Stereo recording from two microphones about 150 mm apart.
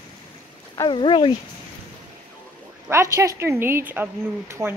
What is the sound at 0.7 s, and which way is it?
Speech, 35° left (ahead or behind).